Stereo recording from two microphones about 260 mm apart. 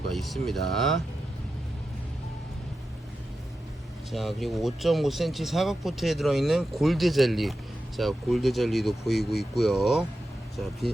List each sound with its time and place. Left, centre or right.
0.1 s speech: centre
4.1 s speech: centre